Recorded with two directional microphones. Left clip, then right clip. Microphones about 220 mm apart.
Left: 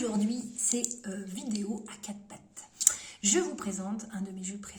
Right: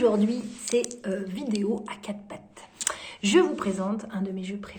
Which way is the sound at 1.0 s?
10° left (ahead or behind).